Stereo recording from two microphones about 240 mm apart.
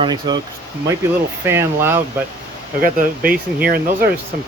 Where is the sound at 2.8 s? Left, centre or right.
Right.